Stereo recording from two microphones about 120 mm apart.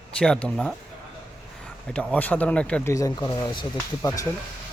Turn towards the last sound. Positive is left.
turn(degrees=30)  # may be behind; listen again after turning